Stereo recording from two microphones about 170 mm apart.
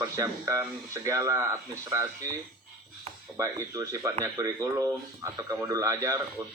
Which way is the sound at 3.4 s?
20° right (ahead or behind).